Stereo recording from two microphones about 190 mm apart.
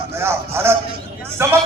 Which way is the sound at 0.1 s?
15° right (ahead or behind).